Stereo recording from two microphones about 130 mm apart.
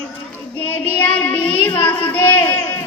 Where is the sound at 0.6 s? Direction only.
15° left (ahead or behind).